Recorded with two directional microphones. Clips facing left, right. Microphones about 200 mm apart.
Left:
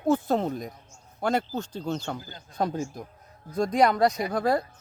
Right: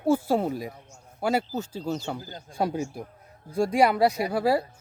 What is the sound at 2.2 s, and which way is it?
Speech, 40° right (ahead or behind).